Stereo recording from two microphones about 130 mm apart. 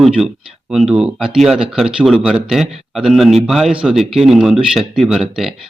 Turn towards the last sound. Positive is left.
turn(degrees=0)  # may be behind; listen again after turning